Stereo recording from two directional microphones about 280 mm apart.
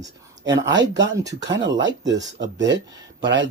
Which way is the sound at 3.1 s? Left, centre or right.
Right.